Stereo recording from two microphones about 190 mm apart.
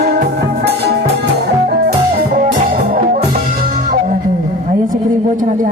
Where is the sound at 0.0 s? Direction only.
55° right (ahead or behind).